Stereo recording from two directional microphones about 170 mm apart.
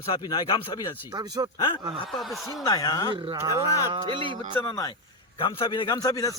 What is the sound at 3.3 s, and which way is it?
Speech, 20° right (ahead or behind).